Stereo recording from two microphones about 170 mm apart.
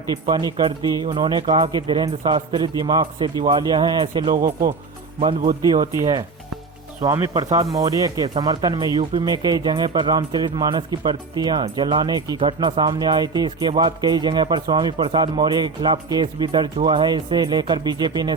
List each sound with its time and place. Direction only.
0.1 s speech: 25° right (ahead or behind)
5.2 s speech: 40° right (ahead or behind)
6.0 s speech: 25° right (ahead or behind)